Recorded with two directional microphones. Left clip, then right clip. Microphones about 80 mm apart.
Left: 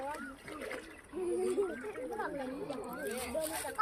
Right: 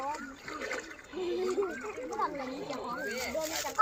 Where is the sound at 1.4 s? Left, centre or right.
Right.